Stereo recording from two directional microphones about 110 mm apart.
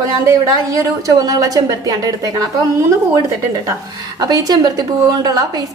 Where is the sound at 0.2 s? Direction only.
30° right (ahead or behind).